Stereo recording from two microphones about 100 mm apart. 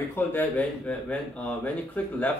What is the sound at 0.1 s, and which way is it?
Speech, 20° left (ahead or behind).